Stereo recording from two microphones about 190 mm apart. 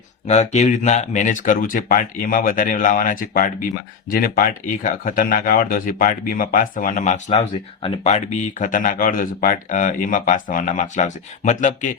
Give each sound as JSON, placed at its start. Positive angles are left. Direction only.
{"t": 0.3, "sound": "speech", "side_deg": 35}